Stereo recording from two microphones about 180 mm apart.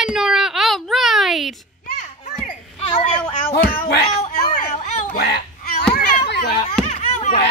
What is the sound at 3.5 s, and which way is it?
Speech, 55° left (ahead or behind).